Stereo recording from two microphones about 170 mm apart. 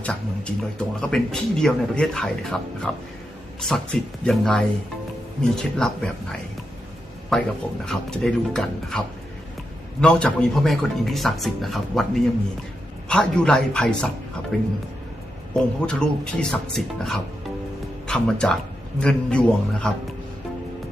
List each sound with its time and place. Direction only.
0.0 s a sound: 5° left (ahead or behind)
1.0 s a man's voice: 5° left (ahead or behind)
4.2 s a man's voice: 5° left (ahead or behind)
7.3 s a man's voice: centre (ahead or behind)
10.0 s a man's voice: 5° left (ahead or behind)